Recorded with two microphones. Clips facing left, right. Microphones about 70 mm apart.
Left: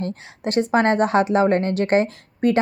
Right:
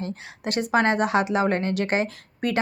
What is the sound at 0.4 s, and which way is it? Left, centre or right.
Speech, left.